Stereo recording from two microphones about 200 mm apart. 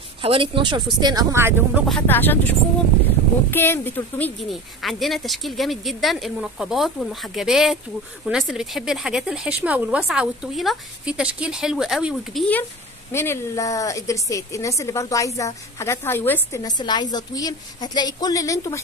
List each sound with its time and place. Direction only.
0.2 s speech: 25° right (ahead or behind)
1.9 s a woman's voice: 5° left (ahead or behind)